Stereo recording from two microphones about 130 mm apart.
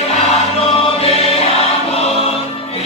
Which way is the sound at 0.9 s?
50° left (ahead or behind).